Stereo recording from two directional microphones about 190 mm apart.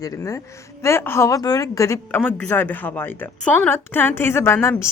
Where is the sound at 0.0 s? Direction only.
15° left (ahead or behind).